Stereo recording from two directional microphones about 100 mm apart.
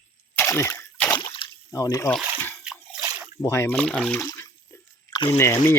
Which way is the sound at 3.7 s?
10° left (ahead or behind).